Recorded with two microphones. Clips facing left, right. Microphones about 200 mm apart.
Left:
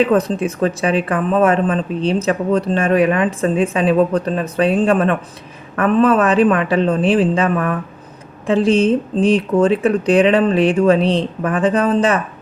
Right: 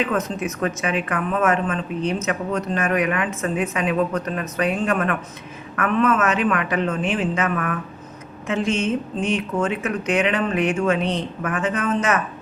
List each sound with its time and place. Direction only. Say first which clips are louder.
0.0 s speech: left 8 dB; 35° left (ahead or behind)